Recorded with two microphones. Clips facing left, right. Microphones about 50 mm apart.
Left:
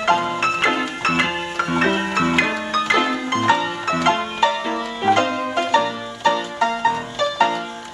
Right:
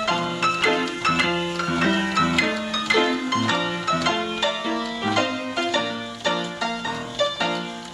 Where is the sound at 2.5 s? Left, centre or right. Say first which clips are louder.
Left 4 dB; centre.